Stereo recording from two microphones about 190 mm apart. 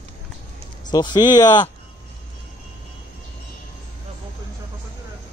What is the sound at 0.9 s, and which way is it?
Speech, 20° left (ahead or behind).